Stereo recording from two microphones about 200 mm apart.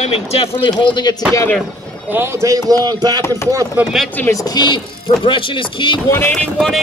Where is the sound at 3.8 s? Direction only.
Centre (ahead or behind); by 6.1 s 25° left (ahead or behind).